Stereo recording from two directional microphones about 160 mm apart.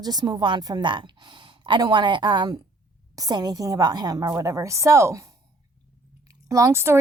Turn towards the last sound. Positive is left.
turn(degrees=-15)  # may be behind; listen again after turning